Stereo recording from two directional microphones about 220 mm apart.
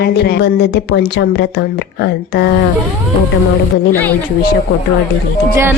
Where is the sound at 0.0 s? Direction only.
45° left (ahead or behind).